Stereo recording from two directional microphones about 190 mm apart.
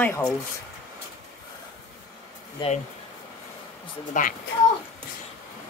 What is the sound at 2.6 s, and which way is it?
Speech, 25° left (ahead or behind).